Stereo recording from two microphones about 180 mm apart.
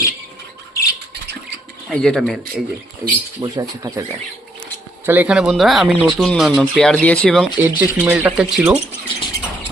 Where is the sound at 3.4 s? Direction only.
20° right (ahead or behind).